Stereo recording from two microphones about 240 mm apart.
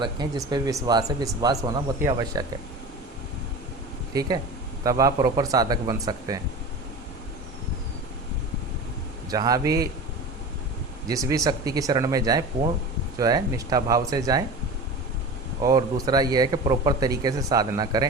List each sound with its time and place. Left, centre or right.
0.0 s speech: centre
4.1 s speech: centre
9.3 s speech: centre
11.1 s speech: centre
15.6 s speech: centre